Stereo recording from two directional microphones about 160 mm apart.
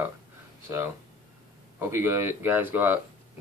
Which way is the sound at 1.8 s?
15° right (ahead or behind).